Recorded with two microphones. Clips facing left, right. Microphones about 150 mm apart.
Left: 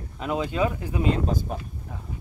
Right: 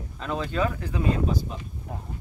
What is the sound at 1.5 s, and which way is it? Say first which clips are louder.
Speech: left 5 dB; 55° left (ahead or behind).